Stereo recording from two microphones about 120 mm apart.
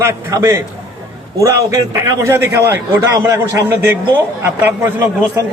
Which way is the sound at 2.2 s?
25° right (ahead or behind).